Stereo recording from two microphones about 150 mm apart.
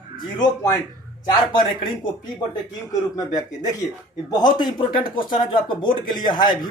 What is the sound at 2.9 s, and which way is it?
Speech, 25° left (ahead or behind).